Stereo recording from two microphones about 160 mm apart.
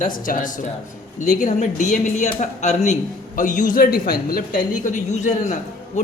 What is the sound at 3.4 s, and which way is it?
Speech, 55° left (ahead or behind).